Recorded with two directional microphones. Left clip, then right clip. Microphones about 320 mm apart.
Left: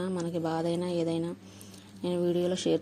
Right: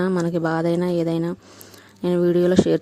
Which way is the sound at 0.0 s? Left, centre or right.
Right.